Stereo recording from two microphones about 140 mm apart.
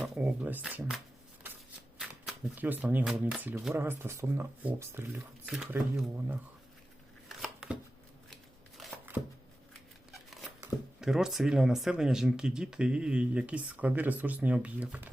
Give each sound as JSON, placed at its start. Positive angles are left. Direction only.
{"t": 0.0, "sound": "speech", "side_deg": -10}
{"t": 2.6, "sound": "speech", "side_deg": -15}
{"t": 7.3, "sound": "chopping", "side_deg": -5}
{"t": 8.8, "sound": "a sound", "side_deg": 0}
{"t": 10.1, "sound": "a sound", "side_deg": 0}
{"t": 11.0, "sound": "speech", "side_deg": -5}